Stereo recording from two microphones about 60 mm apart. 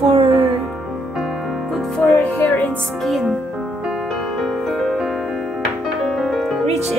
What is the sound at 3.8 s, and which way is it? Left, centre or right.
Music, centre.